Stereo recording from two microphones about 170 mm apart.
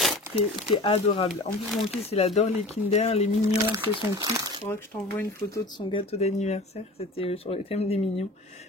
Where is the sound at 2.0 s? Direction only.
35° left (ahead or behind).